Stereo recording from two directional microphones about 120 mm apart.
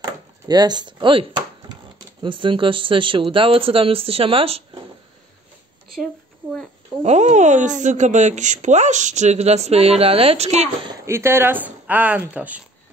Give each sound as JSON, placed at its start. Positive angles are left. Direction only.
{"t": 0.0, "sound": "a sound", "side_deg": -35}
{"t": 2.2, "sound": "speech", "side_deg": -45}
{"t": 7.0, "sound": "speech", "side_deg": -70}
{"t": 11.1, "sound": "speech", "side_deg": -20}